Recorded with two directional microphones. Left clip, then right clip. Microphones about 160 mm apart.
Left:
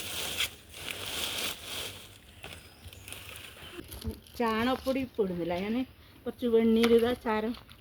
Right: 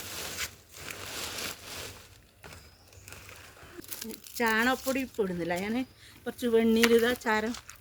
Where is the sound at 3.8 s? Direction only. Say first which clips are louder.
Right 2 dB; 15° right (ahead or behind).